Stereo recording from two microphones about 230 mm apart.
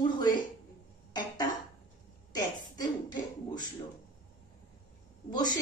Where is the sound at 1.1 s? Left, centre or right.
Centre.